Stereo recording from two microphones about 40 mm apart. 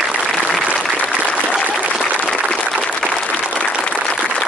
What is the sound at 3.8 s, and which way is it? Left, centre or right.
Applause, centre.